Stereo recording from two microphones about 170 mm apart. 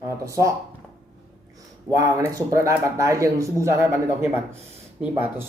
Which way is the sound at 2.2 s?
20° right (ahead or behind).